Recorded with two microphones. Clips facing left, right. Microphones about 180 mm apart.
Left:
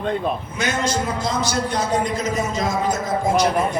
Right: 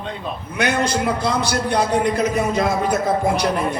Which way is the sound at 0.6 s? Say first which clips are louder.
Right 4 dB; 65° right (ahead or behind).